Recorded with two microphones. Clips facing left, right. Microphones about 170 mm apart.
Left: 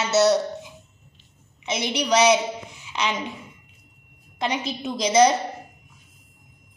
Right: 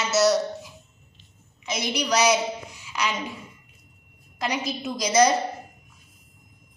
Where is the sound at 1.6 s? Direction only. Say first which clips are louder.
Left 2 dB; 25° left (ahead or behind).